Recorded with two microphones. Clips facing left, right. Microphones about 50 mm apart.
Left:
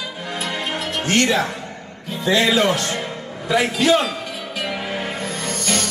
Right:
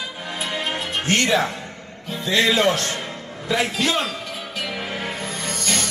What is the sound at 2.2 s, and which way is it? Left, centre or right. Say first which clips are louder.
Speech: left 2 dB; left.